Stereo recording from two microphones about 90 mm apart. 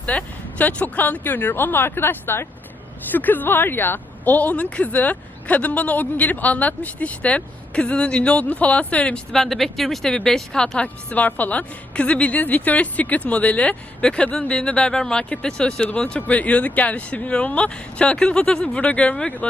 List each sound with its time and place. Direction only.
0.0 s a woman's voice: 15° left (ahead or behind)
10.8 s a woman's voice: 20° left (ahead or behind)